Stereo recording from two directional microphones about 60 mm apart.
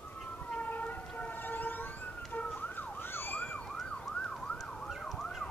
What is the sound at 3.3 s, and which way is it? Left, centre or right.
Emergency vehicle, left.